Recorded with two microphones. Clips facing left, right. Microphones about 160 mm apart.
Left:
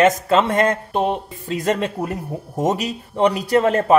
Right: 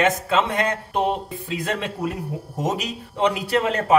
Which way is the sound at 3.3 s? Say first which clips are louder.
Left 5 dB; 40° left (ahead or behind).